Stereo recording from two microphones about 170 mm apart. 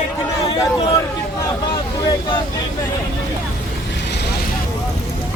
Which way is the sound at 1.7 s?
25° left (ahead or behind).